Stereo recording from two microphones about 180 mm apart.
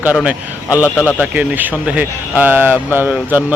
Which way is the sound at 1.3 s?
10° right (ahead or behind).